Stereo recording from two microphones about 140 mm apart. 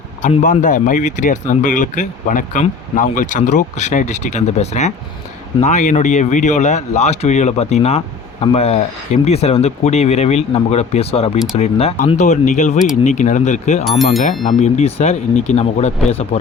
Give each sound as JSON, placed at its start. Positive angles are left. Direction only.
{"t": 0.2, "sound": "speech", "side_deg": 60}
{"t": 12.0, "sound": "speech", "side_deg": 55}